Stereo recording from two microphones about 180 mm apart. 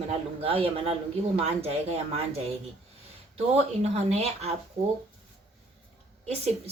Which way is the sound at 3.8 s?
35° right (ahead or behind).